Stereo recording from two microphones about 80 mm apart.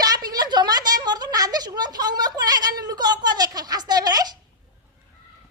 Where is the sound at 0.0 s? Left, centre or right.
Right.